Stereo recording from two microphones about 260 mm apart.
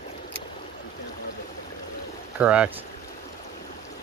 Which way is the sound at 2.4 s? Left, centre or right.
Centre.